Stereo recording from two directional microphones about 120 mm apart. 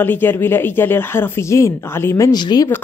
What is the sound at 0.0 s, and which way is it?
Speech, 15° left (ahead or behind).